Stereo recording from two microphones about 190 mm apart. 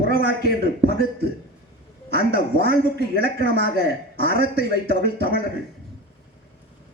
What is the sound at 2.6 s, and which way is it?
A man's voice, 55° left (ahead or behind).